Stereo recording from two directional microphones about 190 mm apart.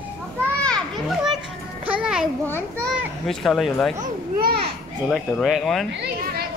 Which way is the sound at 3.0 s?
Centre (ahead or behind).